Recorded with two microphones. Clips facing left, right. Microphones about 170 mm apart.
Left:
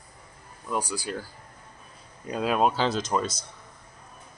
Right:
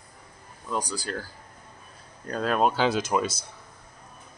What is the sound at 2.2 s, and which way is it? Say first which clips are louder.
Speech: even; 5° left (ahead or behind).